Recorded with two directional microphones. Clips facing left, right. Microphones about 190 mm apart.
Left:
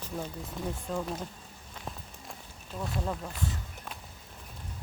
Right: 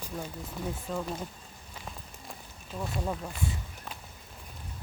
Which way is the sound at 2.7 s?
5° right (ahead or behind).